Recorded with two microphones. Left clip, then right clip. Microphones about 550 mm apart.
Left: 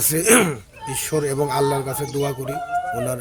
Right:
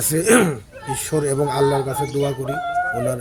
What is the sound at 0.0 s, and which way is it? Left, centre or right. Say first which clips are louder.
Speech: right 1 dB; left.